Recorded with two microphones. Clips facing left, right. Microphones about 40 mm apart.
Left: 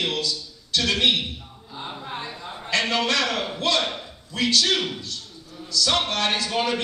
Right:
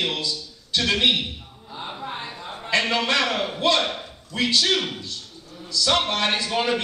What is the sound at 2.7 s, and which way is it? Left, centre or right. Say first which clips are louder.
Speech: right 1 dB; centre.